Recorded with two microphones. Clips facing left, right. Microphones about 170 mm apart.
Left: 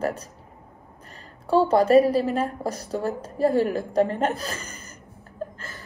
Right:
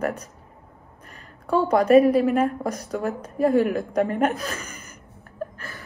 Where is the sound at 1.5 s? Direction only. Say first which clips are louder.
Even; 30° left (ahead or behind).